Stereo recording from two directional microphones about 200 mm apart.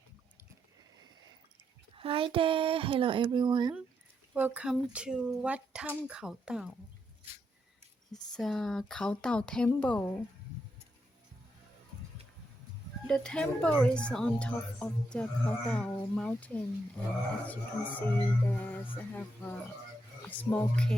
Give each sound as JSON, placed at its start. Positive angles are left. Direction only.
{"t": 2.0, "sound": "speech", "side_deg": -25}
{"t": 4.4, "sound": "a woman's voice", "side_deg": -10}
{"t": 8.1, "sound": "a woman's voice", "side_deg": 0}
{"t": 13.1, "sound": "a woman's voice", "side_deg": 5}
{"t": 17.9, "sound": "speech", "side_deg": 10}